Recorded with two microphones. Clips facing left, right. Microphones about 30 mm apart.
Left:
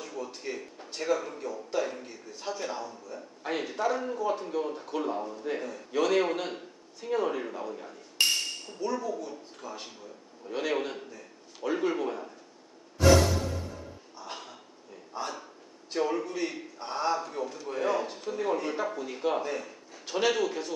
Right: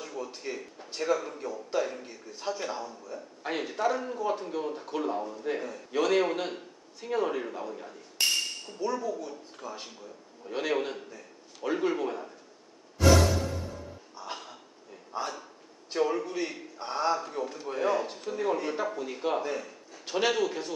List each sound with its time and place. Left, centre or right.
0.0 s a man's voice: centre
14.1 s a sound: centre
15.1 s a man's voice: centre